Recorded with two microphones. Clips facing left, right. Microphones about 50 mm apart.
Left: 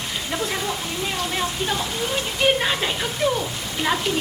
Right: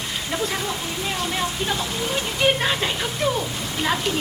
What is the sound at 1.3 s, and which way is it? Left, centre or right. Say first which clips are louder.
Speech: even; centre.